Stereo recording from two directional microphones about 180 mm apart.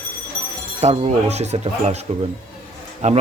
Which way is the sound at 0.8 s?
35° right (ahead or behind).